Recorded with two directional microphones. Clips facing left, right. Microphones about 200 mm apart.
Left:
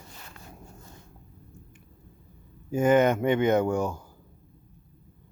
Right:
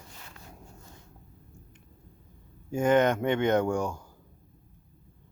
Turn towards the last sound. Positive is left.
turn(degrees=5)  # may be behind; listen again after turning